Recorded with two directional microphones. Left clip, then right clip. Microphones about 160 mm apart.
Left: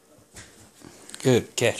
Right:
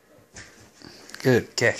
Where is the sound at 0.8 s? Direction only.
5° left (ahead or behind).